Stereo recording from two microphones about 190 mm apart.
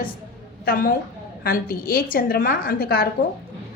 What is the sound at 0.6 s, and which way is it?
A woman's voice, 50° left (ahead or behind).